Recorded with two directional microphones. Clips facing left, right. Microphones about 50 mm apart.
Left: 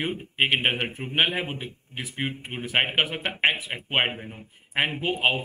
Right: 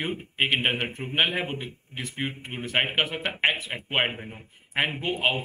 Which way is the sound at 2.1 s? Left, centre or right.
Centre.